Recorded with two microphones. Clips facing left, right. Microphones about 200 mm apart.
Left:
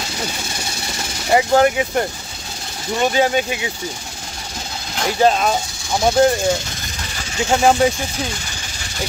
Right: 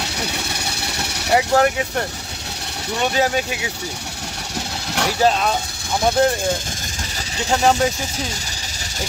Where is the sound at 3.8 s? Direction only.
70° right (ahead or behind).